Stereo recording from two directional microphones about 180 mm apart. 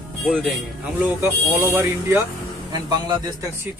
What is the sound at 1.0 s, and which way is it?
A man's voice, 15° right (ahead or behind).